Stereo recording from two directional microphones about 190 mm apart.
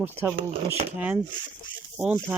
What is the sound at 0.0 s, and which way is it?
Speech, 10° right (ahead or behind).